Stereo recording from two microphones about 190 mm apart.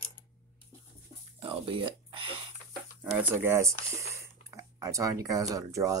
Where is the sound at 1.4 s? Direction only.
25° right (ahead or behind).